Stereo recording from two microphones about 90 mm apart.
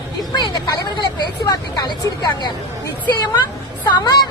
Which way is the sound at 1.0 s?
55° left (ahead or behind).